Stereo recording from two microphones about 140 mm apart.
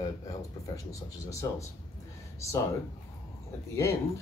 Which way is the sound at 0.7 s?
20° left (ahead or behind).